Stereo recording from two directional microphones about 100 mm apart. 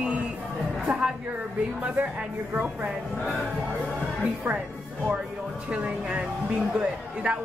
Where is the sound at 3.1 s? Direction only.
Centre (ahead or behind).